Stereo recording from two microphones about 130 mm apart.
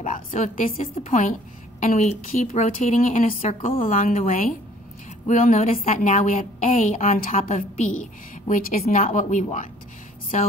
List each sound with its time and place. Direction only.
0.0 s a woman's voice: 75° left (ahead or behind)
0.9 s a woman's voice: 65° left (ahead or behind); by 3.8 s 50° left (ahead or behind)
3.8 s a woman's voice: 90° left
5.2 s a woman's voice: 70° left (ahead or behind); by 9.2 s 90° left
9.3 s a woman's voice: 70° left (ahead or behind)